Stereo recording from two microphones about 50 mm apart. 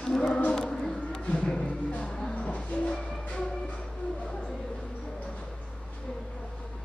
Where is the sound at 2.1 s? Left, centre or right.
Centre.